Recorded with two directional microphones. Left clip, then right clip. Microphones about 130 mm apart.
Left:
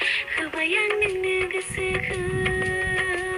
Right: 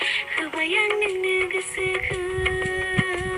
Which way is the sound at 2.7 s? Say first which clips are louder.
Even; 25° right (ahead or behind).